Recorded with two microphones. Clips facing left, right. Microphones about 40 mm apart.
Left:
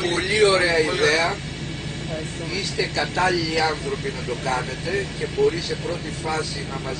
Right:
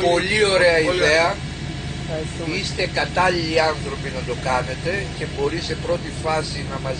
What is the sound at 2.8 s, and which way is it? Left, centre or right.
Speech, centre.